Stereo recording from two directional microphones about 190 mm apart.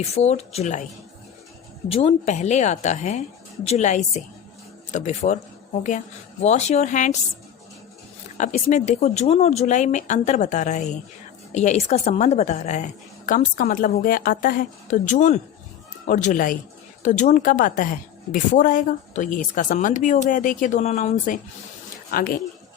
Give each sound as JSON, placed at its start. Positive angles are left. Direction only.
{"t": 0.0, "sound": "a woman's voice", "side_deg": 35}
{"t": 1.9, "sound": "a woman's voice", "side_deg": 30}
{"t": 6.4, "sound": "a woman's voice", "side_deg": 35}
{"t": 8.4, "sound": "a woman's voice", "side_deg": 40}
{"t": 22.1, "sound": "a woman's voice", "side_deg": 50}